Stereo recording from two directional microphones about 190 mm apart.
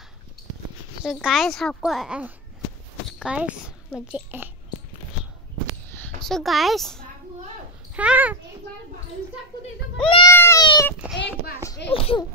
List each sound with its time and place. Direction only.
1.0 s a woman's voice: centre (ahead or behind)
6.2 s a child's voice: centre (ahead or behind)
10.0 s speech: 25° left (ahead or behind)
10.3 s cat: 15° left (ahead or behind)
11.9 s a child's voice: 30° left (ahead or behind)